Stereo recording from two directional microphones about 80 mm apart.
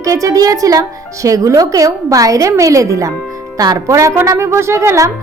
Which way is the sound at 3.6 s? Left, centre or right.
Right.